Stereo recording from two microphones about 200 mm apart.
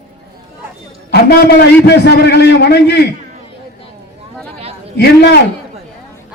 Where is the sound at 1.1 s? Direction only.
55° left (ahead or behind).